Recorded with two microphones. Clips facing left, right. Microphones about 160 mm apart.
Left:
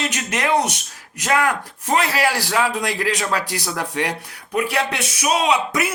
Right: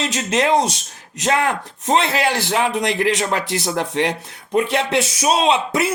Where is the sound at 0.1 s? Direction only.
25° right (ahead or behind).